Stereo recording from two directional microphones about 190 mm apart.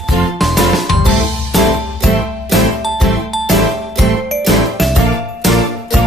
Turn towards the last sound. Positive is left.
turn(degrees=0)  # may be behind; listen again after turning